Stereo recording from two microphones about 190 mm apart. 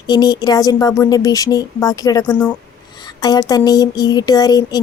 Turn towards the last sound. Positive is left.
turn(degrees=20)  # may be behind; listen again after turning